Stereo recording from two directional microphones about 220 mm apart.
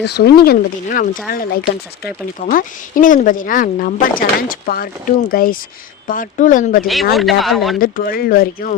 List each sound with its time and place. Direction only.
0.0 s speech: 50° left (ahead or behind)
6.8 s speech: centre (ahead or behind)
7.8 s speech: 40° left (ahead or behind)